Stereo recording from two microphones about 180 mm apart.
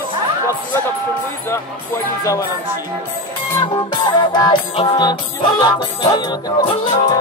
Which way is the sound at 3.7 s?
25° left (ahead or behind).